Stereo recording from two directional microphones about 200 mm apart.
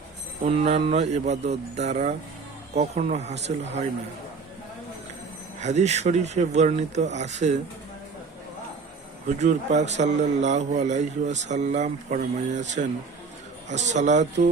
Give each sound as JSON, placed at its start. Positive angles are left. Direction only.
{"t": 0.4, "sound": "a man's voice", "side_deg": -30}
{"t": 5.5, "sound": "a man's voice", "side_deg": -35}
{"t": 9.2, "sound": "a man's voice", "side_deg": -35}